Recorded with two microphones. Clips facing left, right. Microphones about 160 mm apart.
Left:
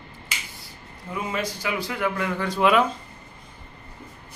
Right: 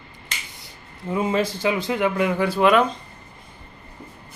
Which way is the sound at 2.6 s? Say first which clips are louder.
Right 2 dB; 5° left (ahead or behind).